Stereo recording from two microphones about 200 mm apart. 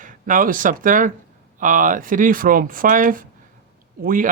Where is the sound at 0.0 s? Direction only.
40° right (ahead or behind).